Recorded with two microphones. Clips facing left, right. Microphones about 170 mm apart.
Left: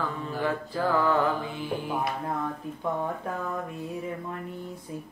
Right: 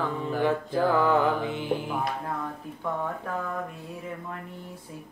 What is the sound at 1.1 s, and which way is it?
Mantra, 20° right (ahead or behind).